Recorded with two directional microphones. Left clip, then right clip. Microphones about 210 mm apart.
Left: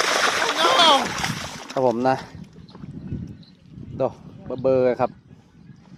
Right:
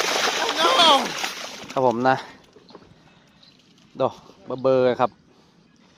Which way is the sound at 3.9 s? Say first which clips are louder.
Right 1 dB; 5° left (ahead or behind).